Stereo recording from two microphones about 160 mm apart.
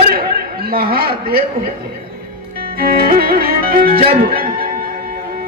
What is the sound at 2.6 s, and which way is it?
Music, 70° right (ahead or behind).